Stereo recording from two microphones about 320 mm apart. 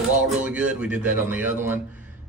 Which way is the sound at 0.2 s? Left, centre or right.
Centre.